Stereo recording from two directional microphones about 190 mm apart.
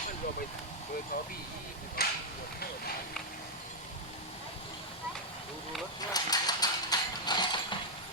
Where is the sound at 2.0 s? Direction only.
55° left (ahead or behind).